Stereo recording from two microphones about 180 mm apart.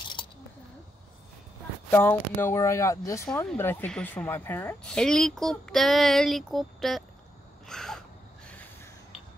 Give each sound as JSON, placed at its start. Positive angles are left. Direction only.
{"t": 1.9, "sound": "speech", "side_deg": 10}
{"t": 7.6, "sound": "gasp", "side_deg": 5}
{"t": 8.5, "sound": "snort", "side_deg": 10}